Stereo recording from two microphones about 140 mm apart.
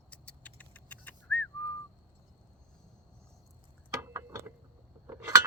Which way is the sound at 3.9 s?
20° right (ahead or behind).